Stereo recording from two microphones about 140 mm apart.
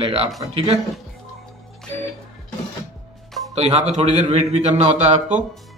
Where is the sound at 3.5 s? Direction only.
45° right (ahead or behind).